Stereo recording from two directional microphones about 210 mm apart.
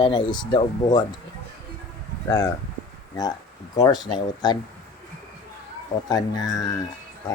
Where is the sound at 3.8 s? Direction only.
20° left (ahead or behind).